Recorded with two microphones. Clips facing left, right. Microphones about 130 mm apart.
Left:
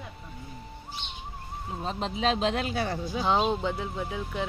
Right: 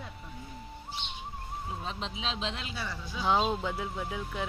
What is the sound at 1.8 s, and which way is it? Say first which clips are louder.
Speech: left 12 dB; 45° left (ahead or behind).